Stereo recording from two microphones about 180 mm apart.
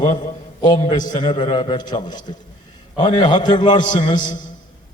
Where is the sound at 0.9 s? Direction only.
45° left (ahead or behind).